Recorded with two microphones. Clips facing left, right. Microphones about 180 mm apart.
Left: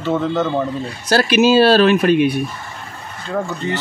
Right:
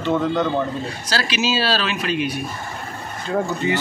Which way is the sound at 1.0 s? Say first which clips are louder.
Left 11 dB; 55° left (ahead or behind).